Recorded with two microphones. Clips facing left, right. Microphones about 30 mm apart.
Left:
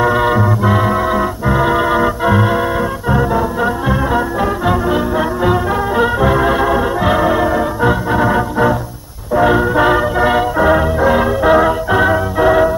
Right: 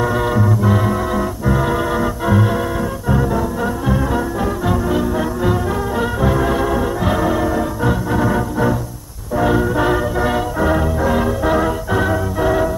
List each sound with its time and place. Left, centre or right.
0.0 s music: left